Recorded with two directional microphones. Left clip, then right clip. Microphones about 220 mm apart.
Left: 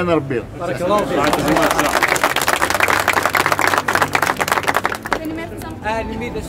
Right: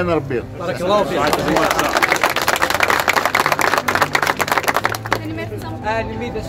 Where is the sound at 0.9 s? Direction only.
50° right (ahead or behind).